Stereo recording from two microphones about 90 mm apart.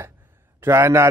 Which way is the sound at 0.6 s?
25° right (ahead or behind).